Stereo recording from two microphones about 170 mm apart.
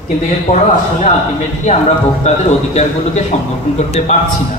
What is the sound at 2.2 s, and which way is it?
Speech, 40° left (ahead or behind).